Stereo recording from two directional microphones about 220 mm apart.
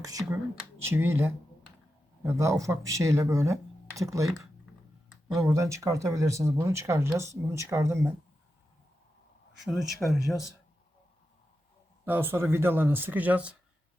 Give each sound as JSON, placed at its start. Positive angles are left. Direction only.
{"t": 0.0, "sound": "speech", "side_deg": -15}
{"t": 5.3, "sound": "speech", "side_deg": -15}
{"t": 9.6, "sound": "speech", "side_deg": 0}
{"t": 12.0, "sound": "speech", "side_deg": -10}